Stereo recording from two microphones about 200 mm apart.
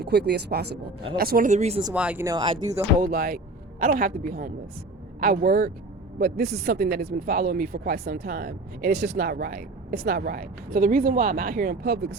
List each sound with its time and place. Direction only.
0.0 s speech: 55° right (ahead or behind); by 1.8 s 35° right (ahead or behind)
1.9 s speech: 5° right (ahead or behind)
3.0 s speech: 50° right (ahead or behind)